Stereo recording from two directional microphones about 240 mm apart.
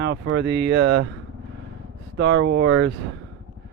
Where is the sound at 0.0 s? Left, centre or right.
Right.